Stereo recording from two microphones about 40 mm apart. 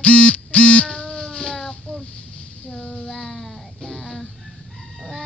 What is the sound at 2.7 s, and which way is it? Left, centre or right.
Child singing, left.